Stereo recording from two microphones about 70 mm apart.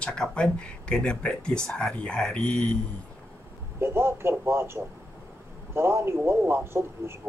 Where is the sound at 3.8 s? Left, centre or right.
Right.